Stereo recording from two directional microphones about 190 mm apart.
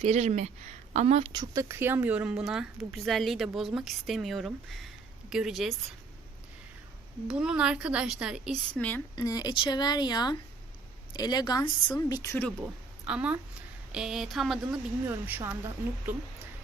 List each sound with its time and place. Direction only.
0.0 s a woman's voice: 35° right (ahead or behind); by 5.7 s centre (ahead or behind)
7.3 s a woman's voice: 5° right (ahead or behind)
9.1 s a woman's voice: 20° left (ahead or behind)
13.1 s a woman's voice: 5° right (ahead or behind)
14.7 s speech: 15° right (ahead or behind)